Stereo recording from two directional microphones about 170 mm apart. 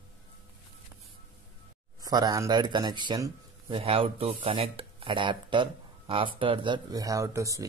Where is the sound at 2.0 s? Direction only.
20° right (ahead or behind).